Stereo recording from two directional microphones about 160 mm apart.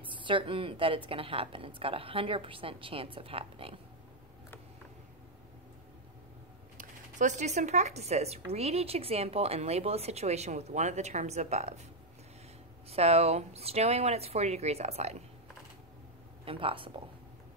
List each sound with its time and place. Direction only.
0.0 s a woman's voice: 30° right (ahead or behind)
6.8 s speech: 50° right (ahead or behind)
12.9 s a woman's voice: 40° right (ahead or behind)
16.4 s a woman's voice: 35° right (ahead or behind)